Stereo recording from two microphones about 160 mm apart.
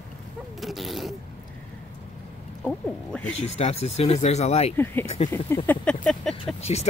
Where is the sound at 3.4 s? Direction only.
40° left (ahead or behind).